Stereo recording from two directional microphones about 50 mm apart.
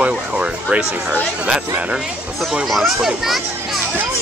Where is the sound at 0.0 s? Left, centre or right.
Right.